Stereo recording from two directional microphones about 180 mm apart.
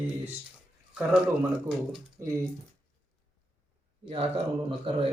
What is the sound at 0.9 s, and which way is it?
Speech, 5° right (ahead or behind).